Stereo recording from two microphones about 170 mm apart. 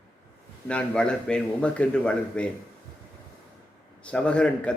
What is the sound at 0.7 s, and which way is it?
A man's voice, 5° left (ahead or behind).